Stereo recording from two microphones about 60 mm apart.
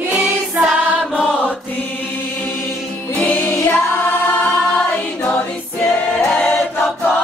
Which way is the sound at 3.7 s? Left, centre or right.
Left.